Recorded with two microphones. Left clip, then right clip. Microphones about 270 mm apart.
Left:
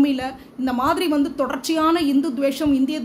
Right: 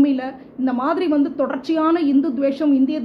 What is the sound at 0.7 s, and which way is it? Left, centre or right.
A woman's voice, centre.